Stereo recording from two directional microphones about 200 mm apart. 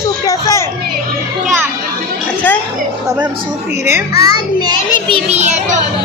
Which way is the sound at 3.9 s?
15° right (ahead or behind).